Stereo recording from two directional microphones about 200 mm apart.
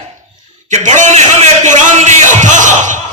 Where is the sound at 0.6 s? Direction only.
35° right (ahead or behind).